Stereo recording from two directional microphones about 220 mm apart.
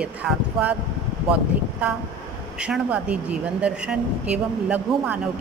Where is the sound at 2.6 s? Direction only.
5° right (ahead or behind).